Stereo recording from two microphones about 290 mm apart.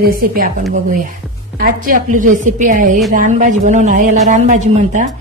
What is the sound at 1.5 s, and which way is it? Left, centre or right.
A woman's voice, right.